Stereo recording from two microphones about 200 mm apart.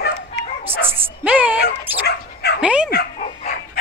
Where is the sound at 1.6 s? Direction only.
50° left (ahead or behind).